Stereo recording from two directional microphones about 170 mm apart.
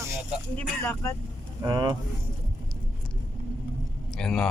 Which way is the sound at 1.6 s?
25° right (ahead or behind).